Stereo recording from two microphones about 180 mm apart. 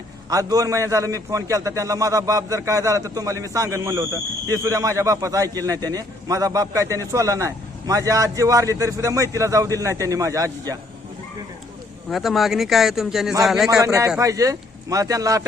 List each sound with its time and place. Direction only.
0.3 s a man's voice: 20° right (ahead or behind)
12.0 s a man's voice: centre (ahead or behind)
13.8 s a man's voice: 20° right (ahead or behind)